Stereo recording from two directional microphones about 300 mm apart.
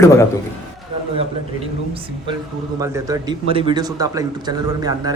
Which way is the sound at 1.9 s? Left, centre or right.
Centre.